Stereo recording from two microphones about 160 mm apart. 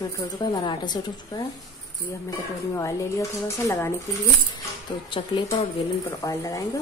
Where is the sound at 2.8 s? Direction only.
20° left (ahead or behind).